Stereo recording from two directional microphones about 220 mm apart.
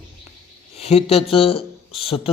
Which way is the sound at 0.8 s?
25° left (ahead or behind).